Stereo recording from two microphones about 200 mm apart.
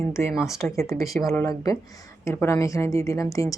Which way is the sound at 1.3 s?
15° left (ahead or behind).